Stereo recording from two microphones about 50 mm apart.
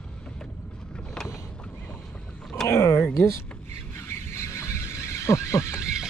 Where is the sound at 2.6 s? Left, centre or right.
Left.